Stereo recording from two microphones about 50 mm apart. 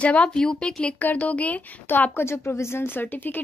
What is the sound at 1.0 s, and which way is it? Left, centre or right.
A woman's voice, left.